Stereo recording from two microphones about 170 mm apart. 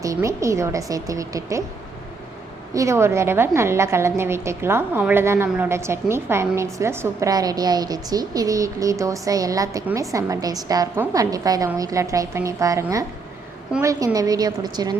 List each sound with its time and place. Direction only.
0.0 s a woman's voice: 20° right (ahead or behind)
2.7 s a woman's voice: 15° right (ahead or behind)